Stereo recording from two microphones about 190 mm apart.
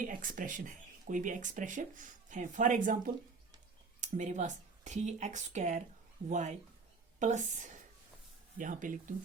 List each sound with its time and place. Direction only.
0.0 s speech: 45° right (ahead or behind)
4.0 s speech: 40° right (ahead or behind)